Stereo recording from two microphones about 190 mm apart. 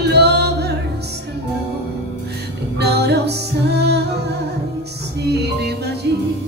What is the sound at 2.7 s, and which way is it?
Music, 60° right (ahead or behind).